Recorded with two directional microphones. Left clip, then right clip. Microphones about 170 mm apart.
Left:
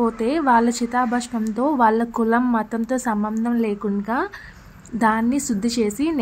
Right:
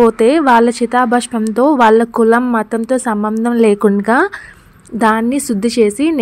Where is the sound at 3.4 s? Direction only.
40° right (ahead or behind).